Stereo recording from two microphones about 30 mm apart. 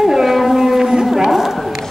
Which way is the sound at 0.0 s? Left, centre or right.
Centre.